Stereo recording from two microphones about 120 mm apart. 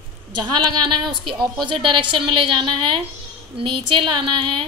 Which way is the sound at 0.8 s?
40° right (ahead or behind).